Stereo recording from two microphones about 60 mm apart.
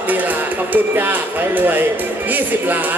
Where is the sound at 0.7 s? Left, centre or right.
Right.